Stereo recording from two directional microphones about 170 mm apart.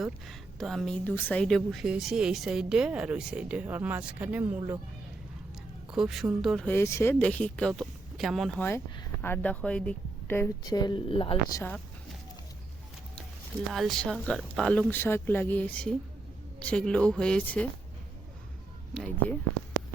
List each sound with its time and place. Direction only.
0.0 s a woman's voice: centre (ahead or behind)
5.9 s a woman's voice: centre (ahead or behind)
6.7 s speech: 15° left (ahead or behind)
10.7 s a woman's voice: 25° left (ahead or behind)
13.7 s a woman's voice: centre (ahead or behind)
18.9 s speech: 5° left (ahead or behind)